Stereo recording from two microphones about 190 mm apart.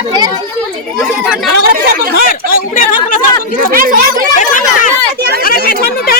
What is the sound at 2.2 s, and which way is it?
Speech, 45° left (ahead or behind).